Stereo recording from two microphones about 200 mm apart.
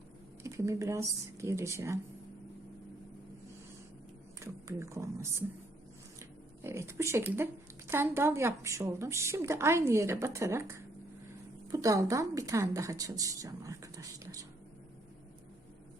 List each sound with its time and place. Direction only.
0.4 s speech: 15° right (ahead or behind)
4.4 s speech: 15° right (ahead or behind)